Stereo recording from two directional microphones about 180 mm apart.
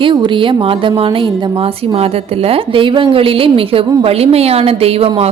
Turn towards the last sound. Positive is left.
turn(degrees=-30)  # may be behind; listen again after turning